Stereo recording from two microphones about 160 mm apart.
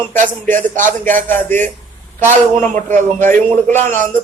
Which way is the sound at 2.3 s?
50° right (ahead or behind).